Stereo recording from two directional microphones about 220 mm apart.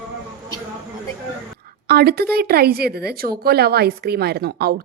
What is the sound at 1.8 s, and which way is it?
Speech, 45° right (ahead or behind).